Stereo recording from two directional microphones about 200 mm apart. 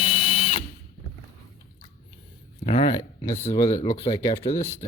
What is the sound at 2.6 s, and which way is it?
Speech, 30° left (ahead or behind).